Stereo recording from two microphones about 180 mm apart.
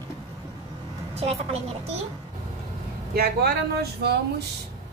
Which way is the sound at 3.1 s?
60° right (ahead or behind).